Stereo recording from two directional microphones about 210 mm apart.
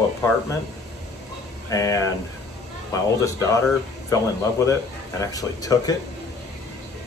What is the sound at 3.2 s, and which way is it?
Speech, 15° left (ahead or behind).